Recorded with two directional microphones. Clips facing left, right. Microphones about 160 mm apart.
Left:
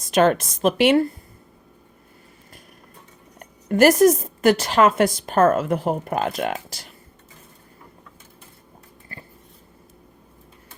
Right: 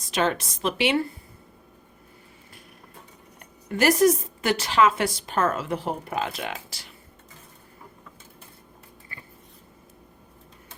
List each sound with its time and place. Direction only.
0.0 s a woman's voice: 50° left (ahead or behind)
3.3 s a woman's voice: 45° left (ahead or behind)